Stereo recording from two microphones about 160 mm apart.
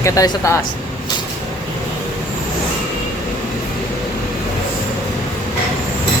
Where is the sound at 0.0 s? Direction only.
20° left (ahead or behind).